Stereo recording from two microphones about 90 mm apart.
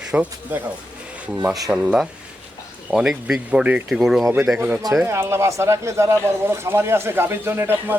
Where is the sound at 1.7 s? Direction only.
10° right (ahead or behind).